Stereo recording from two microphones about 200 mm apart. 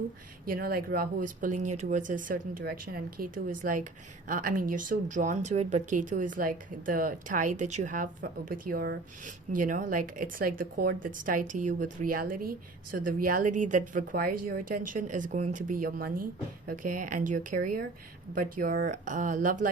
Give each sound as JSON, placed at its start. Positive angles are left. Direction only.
{"t": 0.4, "sound": "a woman's voice", "side_deg": -45}